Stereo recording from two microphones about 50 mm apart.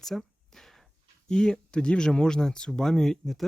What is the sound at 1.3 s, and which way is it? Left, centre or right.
Speech, centre.